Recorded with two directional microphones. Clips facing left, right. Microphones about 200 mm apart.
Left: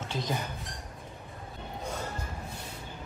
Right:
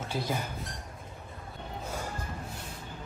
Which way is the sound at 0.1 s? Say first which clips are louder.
Right 1 dB; 10° right (ahead or behind).